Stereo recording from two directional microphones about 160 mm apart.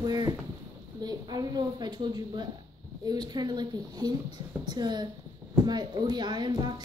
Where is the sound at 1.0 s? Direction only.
25° right (ahead or behind).